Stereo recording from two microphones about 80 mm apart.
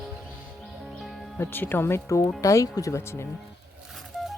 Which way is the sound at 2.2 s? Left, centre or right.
Left.